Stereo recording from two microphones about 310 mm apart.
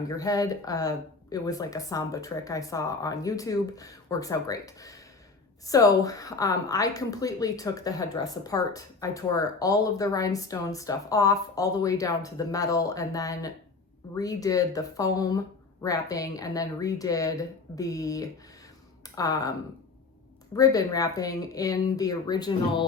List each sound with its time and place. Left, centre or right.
0.2 s a woman's voice: centre
20.6 s a woman's voice: centre